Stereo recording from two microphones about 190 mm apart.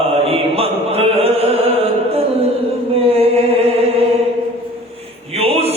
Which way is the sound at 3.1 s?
30° right (ahead or behind).